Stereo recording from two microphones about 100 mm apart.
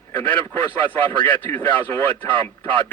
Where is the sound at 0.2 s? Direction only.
20° left (ahead or behind).